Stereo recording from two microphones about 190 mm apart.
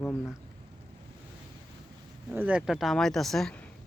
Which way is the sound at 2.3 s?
5° right (ahead or behind).